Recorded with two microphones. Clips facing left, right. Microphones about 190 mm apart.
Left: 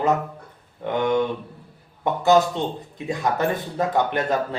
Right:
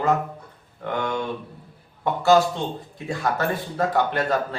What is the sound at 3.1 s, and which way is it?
Speech, 20° left (ahead or behind).